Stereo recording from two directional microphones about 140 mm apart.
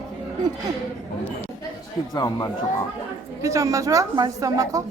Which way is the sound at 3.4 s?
20° right (ahead or behind).